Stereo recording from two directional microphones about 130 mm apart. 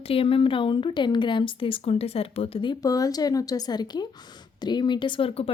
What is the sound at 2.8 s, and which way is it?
A woman's voice, 25° left (ahead or behind).